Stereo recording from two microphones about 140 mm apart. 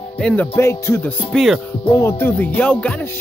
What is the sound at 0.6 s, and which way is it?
Speech, 20° left (ahead or behind).